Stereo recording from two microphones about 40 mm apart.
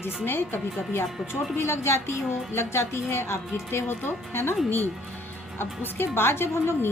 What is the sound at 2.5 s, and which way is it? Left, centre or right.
Speech, left.